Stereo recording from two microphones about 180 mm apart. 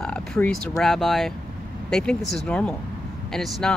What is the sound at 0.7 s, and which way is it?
Speech, centre (ahead or behind).